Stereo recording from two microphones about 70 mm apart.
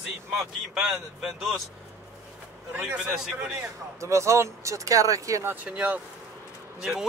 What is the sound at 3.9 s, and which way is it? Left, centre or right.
Speech, right.